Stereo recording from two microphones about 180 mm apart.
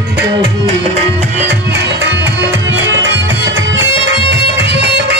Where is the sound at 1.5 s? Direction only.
75° right (ahead or behind).